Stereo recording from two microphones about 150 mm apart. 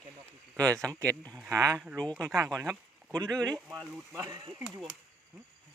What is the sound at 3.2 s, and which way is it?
Speech, 5° left (ahead or behind).